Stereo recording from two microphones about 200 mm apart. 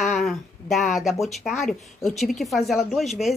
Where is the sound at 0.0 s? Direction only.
Centre (ahead or behind).